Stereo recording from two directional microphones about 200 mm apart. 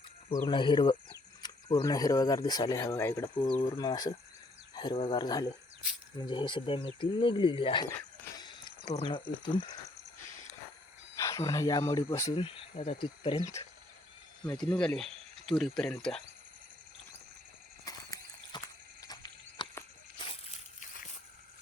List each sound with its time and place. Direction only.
0.4 s speech: 25° left (ahead or behind)
4.7 s cricket: 20° left (ahead or behind)
5.0 s speech: 20° left (ahead or behind)
8.4 s a sound: 20° left (ahead or behind)
9.4 s speech: 25° left (ahead or behind)
11.2 s speech: 15° left (ahead or behind)
14.8 s speech: 5° left (ahead or behind)
17.8 s horse: 20° left (ahead or behind)
19.0 s a sound: 20° left (ahead or behind)